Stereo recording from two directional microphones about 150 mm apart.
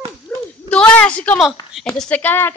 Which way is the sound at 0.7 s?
10° left (ahead or behind).